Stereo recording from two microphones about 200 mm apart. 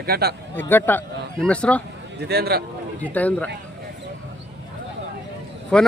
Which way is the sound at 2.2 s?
55° right (ahead or behind).